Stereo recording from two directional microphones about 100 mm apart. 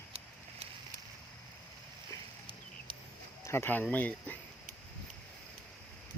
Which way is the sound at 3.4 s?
25° left (ahead or behind).